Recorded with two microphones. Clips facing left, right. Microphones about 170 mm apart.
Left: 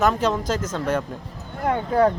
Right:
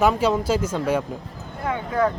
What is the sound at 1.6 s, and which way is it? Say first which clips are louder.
Speech: left 3 dB; 40° left (ahead or behind).